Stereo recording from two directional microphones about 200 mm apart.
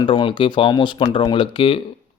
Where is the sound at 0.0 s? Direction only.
25° left (ahead or behind).